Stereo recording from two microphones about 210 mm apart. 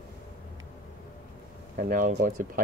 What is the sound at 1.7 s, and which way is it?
Speech, 40° right (ahead or behind).